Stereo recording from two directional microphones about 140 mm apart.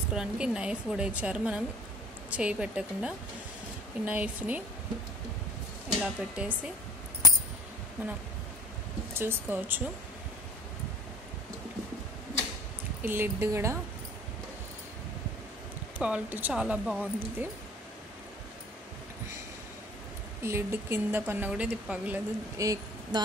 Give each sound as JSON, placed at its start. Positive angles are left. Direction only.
{"t": 0.1, "sound": "a woman's voice", "side_deg": -5}
{"t": 5.9, "sound": "a woman's voice", "side_deg": -5}
{"t": 9.1, "sound": "a woman's voice", "side_deg": -15}
{"t": 13.0, "sound": "speech", "side_deg": -15}
{"t": 16.0, "sound": "a woman's voice", "side_deg": -10}
{"t": 20.4, "sound": "a woman's voice", "side_deg": -20}
{"t": 22.6, "sound": "speech", "side_deg": -25}